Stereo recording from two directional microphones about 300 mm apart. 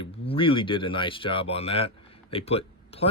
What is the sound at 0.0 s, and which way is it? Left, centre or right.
Speech, centre.